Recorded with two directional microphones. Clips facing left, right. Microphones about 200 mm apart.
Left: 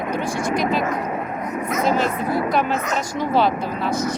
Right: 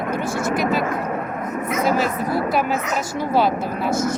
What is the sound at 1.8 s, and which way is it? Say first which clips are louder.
Speech: even; 5° right (ahead or behind).